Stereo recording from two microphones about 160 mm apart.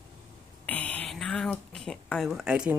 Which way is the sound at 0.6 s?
10° left (ahead or behind).